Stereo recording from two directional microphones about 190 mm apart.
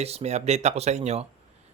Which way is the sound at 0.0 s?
35° right (ahead or behind).